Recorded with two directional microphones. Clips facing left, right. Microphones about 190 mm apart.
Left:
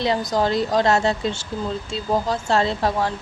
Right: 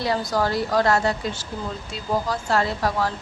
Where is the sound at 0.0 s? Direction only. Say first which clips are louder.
Left 2 dB; 20° left (ahead or behind).